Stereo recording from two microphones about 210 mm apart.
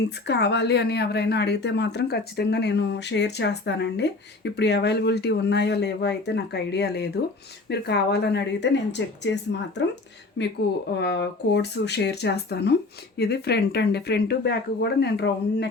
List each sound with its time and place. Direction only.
0.3 s a woman's voice: 55° left (ahead or behind)